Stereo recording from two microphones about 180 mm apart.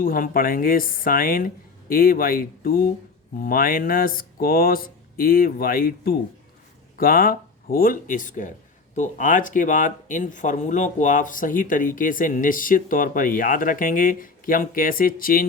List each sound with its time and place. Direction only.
0.0 s speech: 50° left (ahead or behind)